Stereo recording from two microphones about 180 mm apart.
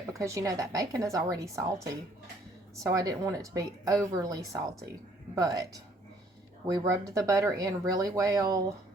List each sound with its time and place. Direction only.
0.1 s a woman's voice: 15° right (ahead or behind)